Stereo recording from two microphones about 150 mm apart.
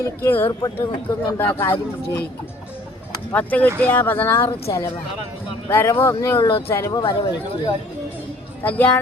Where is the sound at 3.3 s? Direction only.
10° left (ahead or behind).